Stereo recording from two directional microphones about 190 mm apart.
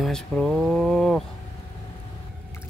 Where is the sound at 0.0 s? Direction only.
Centre (ahead or behind).